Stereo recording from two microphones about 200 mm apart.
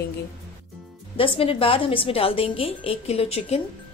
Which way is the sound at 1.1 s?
25° left (ahead or behind).